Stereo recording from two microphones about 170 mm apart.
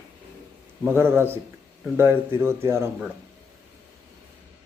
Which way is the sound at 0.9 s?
15° right (ahead or behind).